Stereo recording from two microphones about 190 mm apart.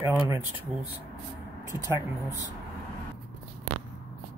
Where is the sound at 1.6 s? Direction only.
15° right (ahead or behind).